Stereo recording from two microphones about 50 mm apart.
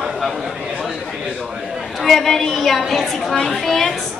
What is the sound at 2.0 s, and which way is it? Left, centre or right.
A woman's voice, centre.